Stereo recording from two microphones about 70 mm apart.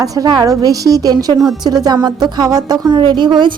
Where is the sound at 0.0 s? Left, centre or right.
Right.